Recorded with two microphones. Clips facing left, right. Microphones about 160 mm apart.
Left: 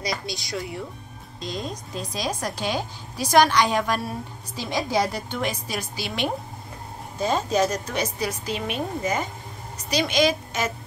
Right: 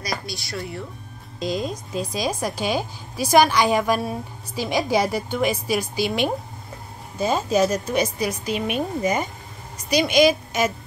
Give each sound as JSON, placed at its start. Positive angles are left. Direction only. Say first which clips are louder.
{"t": 0.0, "sound": "speech", "louder": "even", "side_deg": 20}
{"t": 1.4, "sound": "a woman's voice", "louder": "right 6 dB", "side_deg": -10}